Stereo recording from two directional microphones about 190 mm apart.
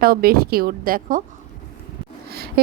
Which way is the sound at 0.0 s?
50° right (ahead or behind).